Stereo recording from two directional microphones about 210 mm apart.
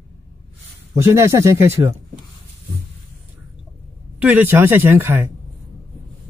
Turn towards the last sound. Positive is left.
turn(degrees=-10)  # may be behind; listen again after turning